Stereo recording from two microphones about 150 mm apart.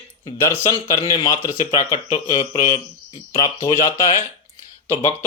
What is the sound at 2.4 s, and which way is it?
Speech, 55° left (ahead or behind).